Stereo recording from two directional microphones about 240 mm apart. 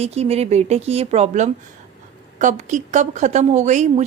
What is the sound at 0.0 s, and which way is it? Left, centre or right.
A woman's voice, right.